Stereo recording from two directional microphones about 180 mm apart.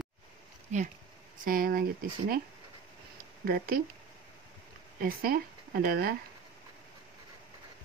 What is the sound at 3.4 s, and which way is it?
Speech, 55° right (ahead or behind).